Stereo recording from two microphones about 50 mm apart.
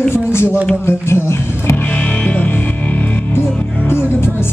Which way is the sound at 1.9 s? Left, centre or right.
Left.